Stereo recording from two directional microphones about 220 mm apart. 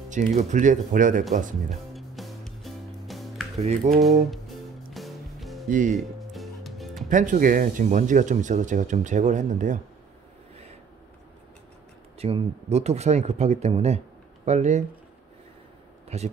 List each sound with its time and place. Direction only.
0.1 s speech: 30° right (ahead or behind)
2.0 s music: centre (ahead or behind)
3.5 s speech: 30° right (ahead or behind)
4.3 s music: centre (ahead or behind)
5.7 s speech: 35° right (ahead or behind)
5.9 s music: centre (ahead or behind)
7.1 s speech: 35° right (ahead or behind)
12.2 s speech: 25° right (ahead or behind)
16.1 s speech: 30° right (ahead or behind)